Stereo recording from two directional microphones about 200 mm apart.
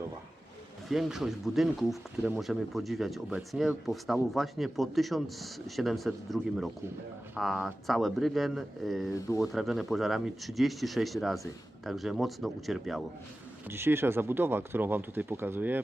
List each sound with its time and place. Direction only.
0.9 s speech: centre (ahead or behind)
13.7 s speech: 10° right (ahead or behind)